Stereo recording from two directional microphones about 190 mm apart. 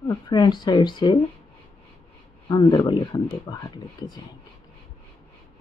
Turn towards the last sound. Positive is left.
turn(degrees=20)  # may be behind; listen again after turning